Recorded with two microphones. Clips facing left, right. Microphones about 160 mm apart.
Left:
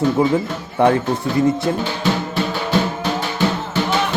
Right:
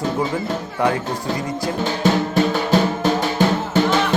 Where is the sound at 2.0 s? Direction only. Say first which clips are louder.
Right 3 dB; 45° right (ahead or behind).